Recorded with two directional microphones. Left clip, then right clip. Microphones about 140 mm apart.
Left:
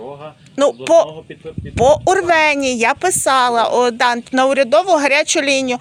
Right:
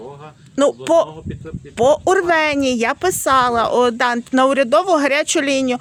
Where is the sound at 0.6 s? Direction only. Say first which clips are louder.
Left 2 dB; 45° right (ahead or behind).